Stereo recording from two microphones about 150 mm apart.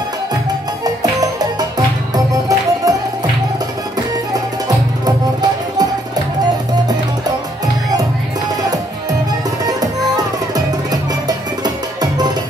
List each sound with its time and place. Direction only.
2.1 s music: 25° right (ahead or behind)
4.3 s music: 25° right (ahead or behind)
9.7 s music: 25° right (ahead or behind)